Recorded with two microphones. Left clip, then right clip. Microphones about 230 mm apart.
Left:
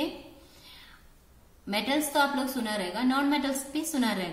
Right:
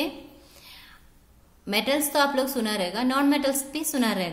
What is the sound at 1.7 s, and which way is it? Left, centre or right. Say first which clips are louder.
A woman's voice: right 4 dB; right.